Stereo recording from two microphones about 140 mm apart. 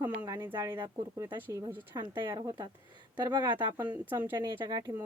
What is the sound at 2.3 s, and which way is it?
Speech, 25° right (ahead or behind).